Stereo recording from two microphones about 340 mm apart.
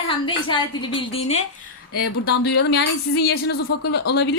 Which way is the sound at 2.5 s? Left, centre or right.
Left.